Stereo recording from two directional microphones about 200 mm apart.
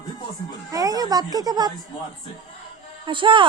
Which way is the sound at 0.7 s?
15° right (ahead or behind).